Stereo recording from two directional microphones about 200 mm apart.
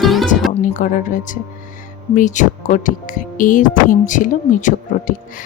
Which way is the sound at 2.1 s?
40° left (ahead or behind).